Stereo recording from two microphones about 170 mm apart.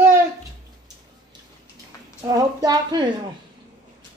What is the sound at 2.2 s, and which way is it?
Speech, 20° right (ahead or behind).